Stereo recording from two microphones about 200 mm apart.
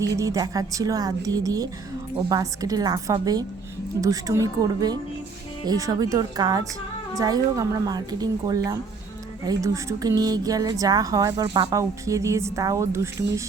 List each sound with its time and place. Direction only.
0.0 s a woman's voice: 15° right (ahead or behind)